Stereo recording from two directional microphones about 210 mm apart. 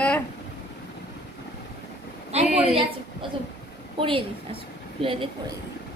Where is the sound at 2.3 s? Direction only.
30° right (ahead or behind).